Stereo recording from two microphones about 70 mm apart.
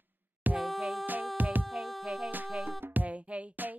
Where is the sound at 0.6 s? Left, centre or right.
Centre.